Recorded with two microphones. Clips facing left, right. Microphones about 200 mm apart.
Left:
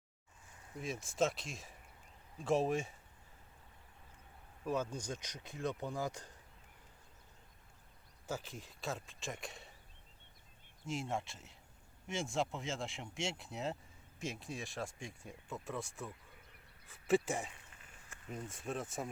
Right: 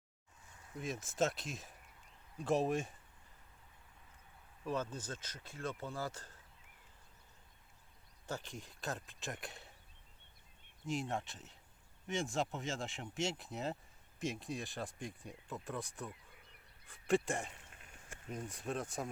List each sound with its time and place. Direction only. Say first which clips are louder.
0.8 s speech: left 1 dB; centre (ahead or behind)
4.6 s speech: left 2 dB; 10° left (ahead or behind)
8.3 s speech: left 1 dB; 5° left (ahead or behind)
10.8 s speech: right 1 dB; centre (ahead or behind)